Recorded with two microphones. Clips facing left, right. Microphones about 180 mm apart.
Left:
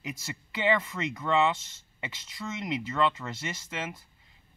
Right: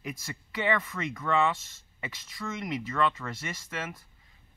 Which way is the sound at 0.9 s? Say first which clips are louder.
Left 1 dB; 20° left (ahead or behind).